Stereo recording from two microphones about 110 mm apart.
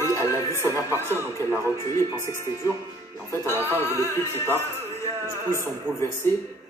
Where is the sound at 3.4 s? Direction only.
25° left (ahead or behind).